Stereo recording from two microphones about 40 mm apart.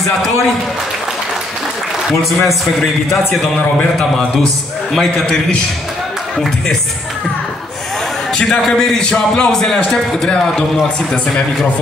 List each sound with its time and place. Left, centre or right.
2.4 s a man's voice: centre
4.9 s a man's voice: centre
5.2 s speech: left
8.6 s a man's voice: centre